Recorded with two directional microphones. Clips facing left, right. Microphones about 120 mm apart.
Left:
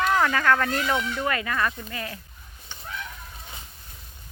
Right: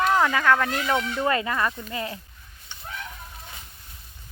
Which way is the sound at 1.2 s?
25° right (ahead or behind).